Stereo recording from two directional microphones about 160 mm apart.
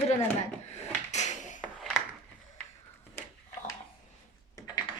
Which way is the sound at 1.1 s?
45° left (ahead or behind).